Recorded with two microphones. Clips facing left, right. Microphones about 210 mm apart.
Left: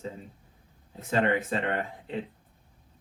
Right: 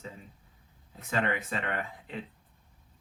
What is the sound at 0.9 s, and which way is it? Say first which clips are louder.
Speech: left 5 dB; 30° left (ahead or behind).